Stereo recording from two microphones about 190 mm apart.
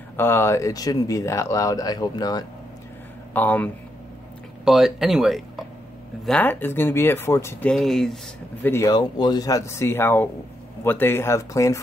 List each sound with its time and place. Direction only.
0.2 s speech: 15° left (ahead or behind)
3.3 s speech: 10° left (ahead or behind)
4.6 s speech: centre (ahead or behind)
6.2 s speech: 10° left (ahead or behind)
8.6 s speech: 15° left (ahead or behind)